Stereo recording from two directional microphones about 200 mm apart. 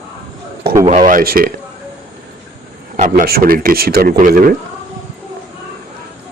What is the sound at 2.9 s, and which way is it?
Speech, 40° right (ahead or behind).